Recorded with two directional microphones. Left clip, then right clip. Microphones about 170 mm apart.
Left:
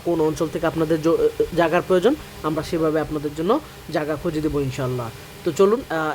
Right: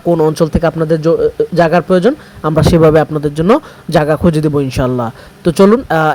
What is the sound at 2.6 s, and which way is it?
Speech, 40° right (ahead or behind).